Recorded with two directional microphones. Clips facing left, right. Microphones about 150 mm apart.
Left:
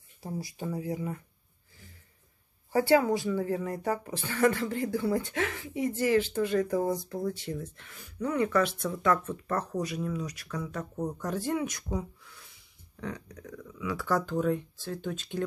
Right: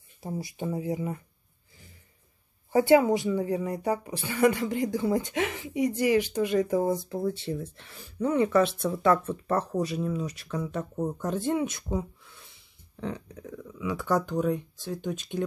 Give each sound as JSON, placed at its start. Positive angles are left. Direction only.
{"t": 0.2, "sound": "speech", "side_deg": -20}
{"t": 2.7, "sound": "speech", "side_deg": -20}